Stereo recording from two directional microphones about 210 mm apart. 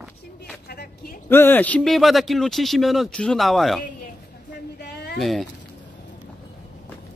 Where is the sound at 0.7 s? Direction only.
45° left (ahead or behind).